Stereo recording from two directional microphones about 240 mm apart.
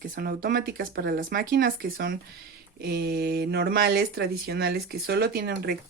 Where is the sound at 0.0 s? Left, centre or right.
Right.